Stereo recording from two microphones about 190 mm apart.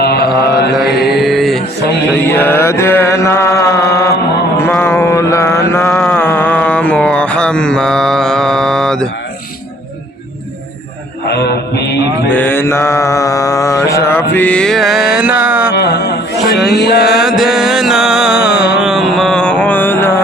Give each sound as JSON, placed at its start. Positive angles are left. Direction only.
{"t": 0.0, "sound": "mantra", "side_deg": 55}
{"t": 0.9, "sound": "mantra", "side_deg": 0}
{"t": 2.3, "sound": "mantra", "side_deg": 10}
{"t": 11.3, "sound": "mantra", "side_deg": 60}
{"t": 12.3, "sound": "mantra", "side_deg": 10}
{"t": 15.7, "sound": "a sound", "side_deg": 60}
{"t": 16.6, "sound": "music", "side_deg": 60}
{"t": 17.1, "sound": "music", "side_deg": 0}